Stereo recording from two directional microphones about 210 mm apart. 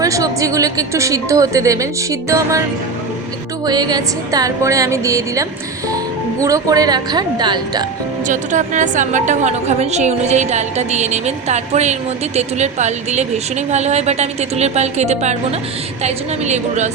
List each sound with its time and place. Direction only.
0.0 s a woman's voice: 15° right (ahead or behind)
3.7 s a woman's voice: 20° right (ahead or behind)
8.3 s a woman's voice: 35° right (ahead or behind)